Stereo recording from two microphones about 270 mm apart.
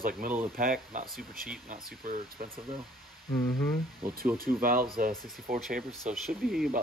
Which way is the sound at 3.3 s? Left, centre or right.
Centre.